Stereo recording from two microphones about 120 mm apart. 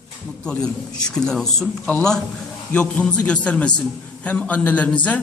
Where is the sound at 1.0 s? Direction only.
5° left (ahead or behind).